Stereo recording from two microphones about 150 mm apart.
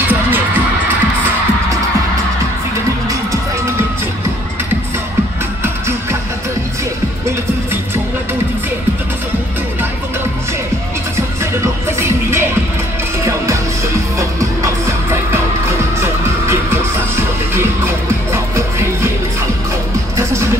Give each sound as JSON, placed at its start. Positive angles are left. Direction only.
{"t": 3.1, "sound": "music", "side_deg": -20}
{"t": 12.0, "sound": "music", "side_deg": -15}
{"t": 14.1, "sound": "music", "side_deg": -20}